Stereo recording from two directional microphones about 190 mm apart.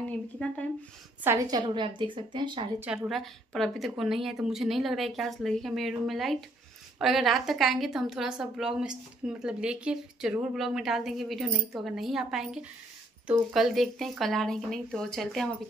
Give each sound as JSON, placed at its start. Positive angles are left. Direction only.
{"t": 1.2, "sound": "a woman's voice", "side_deg": -20}
{"t": 2.8, "sound": "speech", "side_deg": -10}
{"t": 3.1, "sound": "a woman's voice", "side_deg": 0}